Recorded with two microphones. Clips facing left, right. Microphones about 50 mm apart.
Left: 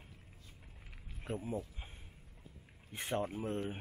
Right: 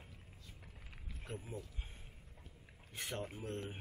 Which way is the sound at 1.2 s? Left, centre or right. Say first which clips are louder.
Left 8 dB; left.